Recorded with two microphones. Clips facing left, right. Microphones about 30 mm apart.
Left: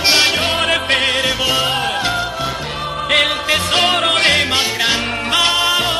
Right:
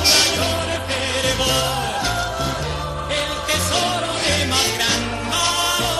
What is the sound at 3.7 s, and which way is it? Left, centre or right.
Music, left.